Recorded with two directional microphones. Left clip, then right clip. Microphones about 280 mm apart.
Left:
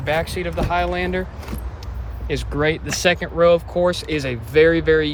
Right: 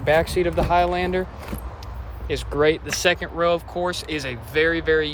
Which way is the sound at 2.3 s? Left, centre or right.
Centre.